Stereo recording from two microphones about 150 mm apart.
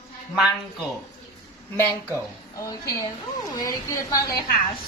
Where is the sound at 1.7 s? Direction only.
15° left (ahead or behind).